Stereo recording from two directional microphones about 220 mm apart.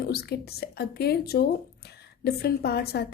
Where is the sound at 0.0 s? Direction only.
45° left (ahead or behind).